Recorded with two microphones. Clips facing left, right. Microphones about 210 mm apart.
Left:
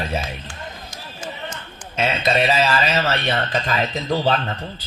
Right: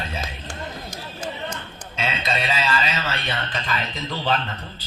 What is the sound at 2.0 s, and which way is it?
Speech, 45° left (ahead or behind).